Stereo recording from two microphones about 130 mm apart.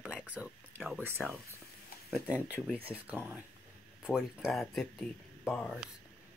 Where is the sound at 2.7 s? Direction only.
10° right (ahead or behind); by 5.9 s 5° left (ahead or behind).